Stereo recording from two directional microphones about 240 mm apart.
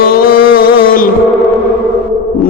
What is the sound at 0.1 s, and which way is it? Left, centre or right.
Music, left.